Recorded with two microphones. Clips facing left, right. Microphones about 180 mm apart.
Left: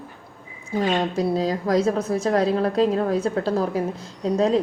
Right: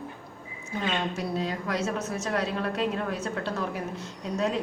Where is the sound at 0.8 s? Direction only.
40° left (ahead or behind).